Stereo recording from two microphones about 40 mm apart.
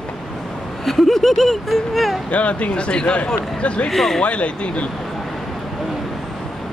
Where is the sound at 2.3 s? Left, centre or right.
Left.